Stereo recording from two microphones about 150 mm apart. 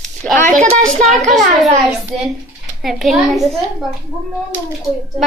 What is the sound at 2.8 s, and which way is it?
Speech, centre (ahead or behind).